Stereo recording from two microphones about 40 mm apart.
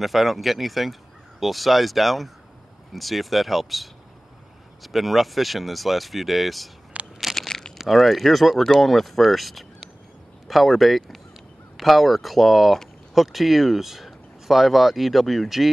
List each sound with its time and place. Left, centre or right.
0.0 s speech: centre
7.0 s a sound: right
7.3 s crumpling: centre
7.9 s speech: centre